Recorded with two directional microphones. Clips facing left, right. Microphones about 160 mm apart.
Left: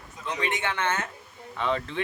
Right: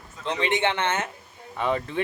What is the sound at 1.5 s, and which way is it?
Speech, 10° right (ahead or behind).